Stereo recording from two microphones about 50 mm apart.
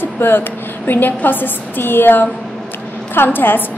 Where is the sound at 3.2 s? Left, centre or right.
Left.